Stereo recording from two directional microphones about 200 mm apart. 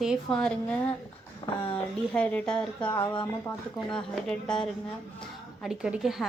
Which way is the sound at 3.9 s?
5° left (ahead or behind).